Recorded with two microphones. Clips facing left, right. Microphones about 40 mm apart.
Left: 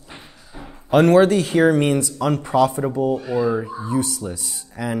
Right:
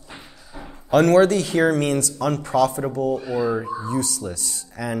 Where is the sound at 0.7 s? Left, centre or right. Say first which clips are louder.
Left 2 dB; centre.